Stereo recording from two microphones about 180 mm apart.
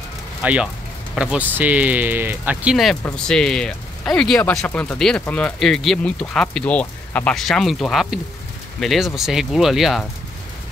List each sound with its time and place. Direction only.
0.4 s speech: 10° right (ahead or behind)